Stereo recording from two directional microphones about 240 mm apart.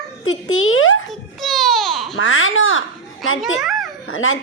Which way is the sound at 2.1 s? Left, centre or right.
Left.